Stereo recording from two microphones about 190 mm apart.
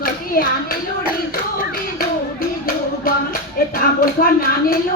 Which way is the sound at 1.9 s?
50° left (ahead or behind).